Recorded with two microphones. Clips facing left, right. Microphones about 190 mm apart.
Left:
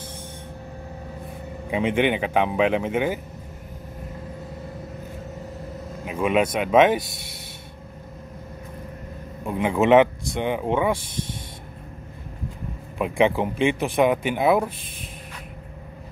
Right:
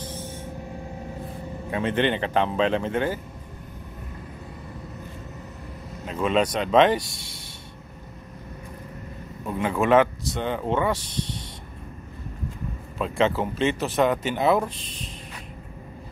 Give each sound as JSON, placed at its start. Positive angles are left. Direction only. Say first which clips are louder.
{"t": 1.7, "sound": "speech", "louder": "left 2 dB", "side_deg": 15}
{"t": 6.0, "sound": "speech", "louder": "left 1 dB", "side_deg": 10}
{"t": 9.4, "sound": "speech", "louder": "left 3 dB", "side_deg": 15}
{"t": 13.0, "sound": "speech", "louder": "left 3 dB", "side_deg": 15}